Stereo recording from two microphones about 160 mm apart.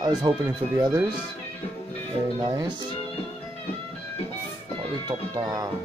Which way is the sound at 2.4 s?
25° right (ahead or behind).